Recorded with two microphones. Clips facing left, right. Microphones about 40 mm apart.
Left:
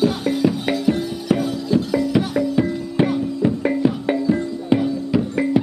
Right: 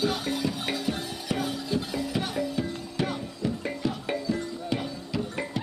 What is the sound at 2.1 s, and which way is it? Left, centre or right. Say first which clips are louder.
Music: left 9 dB; left.